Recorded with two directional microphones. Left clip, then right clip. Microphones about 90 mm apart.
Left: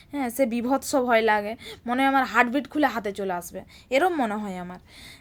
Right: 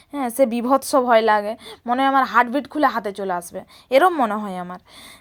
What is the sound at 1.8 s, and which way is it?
A woman's voice, 15° right (ahead or behind).